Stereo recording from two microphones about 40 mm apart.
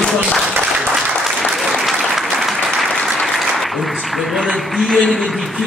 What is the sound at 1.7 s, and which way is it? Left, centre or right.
Applause, centre.